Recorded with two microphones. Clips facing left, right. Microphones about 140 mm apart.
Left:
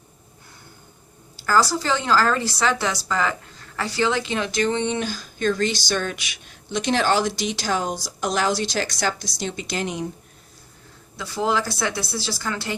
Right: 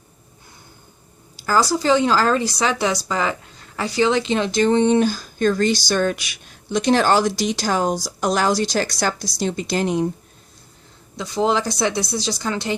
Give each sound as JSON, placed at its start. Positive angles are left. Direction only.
{"t": 1.4, "sound": "a woman's voice", "side_deg": -15}
{"t": 11.2, "sound": "a woman's voice", "side_deg": -20}